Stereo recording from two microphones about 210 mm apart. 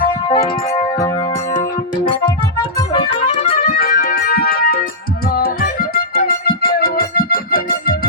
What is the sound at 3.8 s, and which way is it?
Music, 45° left (ahead or behind).